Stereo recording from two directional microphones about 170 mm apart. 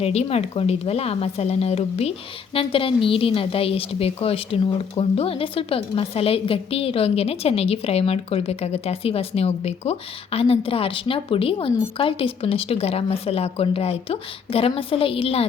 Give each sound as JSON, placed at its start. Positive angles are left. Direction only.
{"t": 0.0, "sound": "speech", "side_deg": 40}